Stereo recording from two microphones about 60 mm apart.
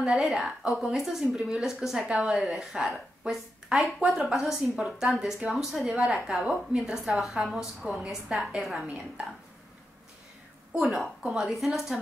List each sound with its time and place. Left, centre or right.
0.0 s a woman's voice: centre
2.3 s a woman's voice: centre
8.8 s a woman's voice: right
10.7 s a woman's voice: centre